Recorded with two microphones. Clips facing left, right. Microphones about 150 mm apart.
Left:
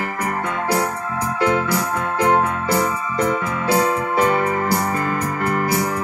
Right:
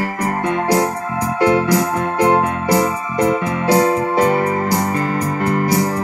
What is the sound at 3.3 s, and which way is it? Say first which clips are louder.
Keyboard: right 5 dB; 35° right (ahead or behind).